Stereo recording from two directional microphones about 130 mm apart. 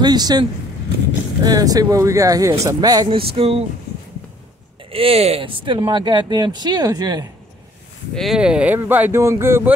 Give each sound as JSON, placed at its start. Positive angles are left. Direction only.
{"t": 0.0, "sound": "speech", "side_deg": -30}
{"t": 3.1, "sound": "a sound", "side_deg": -45}
{"t": 4.9, "sound": "speech", "side_deg": -50}
{"t": 8.1, "sound": "speech", "side_deg": 0}